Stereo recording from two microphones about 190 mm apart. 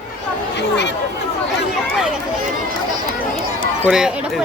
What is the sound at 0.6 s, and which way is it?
Speech, 65° left (ahead or behind).